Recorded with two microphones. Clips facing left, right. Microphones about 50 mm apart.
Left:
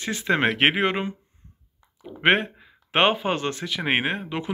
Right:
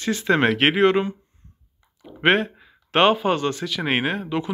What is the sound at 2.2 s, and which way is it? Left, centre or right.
Speech, left.